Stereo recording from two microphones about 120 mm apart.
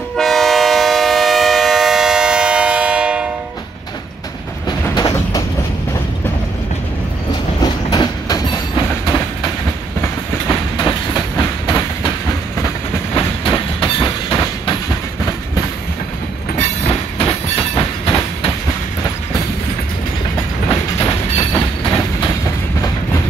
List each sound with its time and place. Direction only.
0.2 s train: centre (ahead or behind)
4.9 s train: 30° left (ahead or behind)
7.6 s train: 35° left (ahead or behind)
10.5 s train: 30° left (ahead or behind)
13.1 s train: 45° left (ahead or behind)
17.2 s train: 45° left (ahead or behind)
21.0 s train: 35° left (ahead or behind)
22.2 s train: 25° left (ahead or behind)